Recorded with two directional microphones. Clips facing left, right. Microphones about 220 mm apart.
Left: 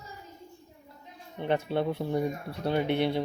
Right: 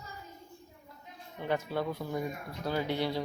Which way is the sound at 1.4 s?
25° left (ahead or behind).